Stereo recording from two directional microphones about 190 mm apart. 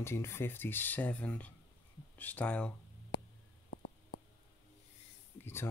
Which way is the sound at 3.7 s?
60° left (ahead or behind).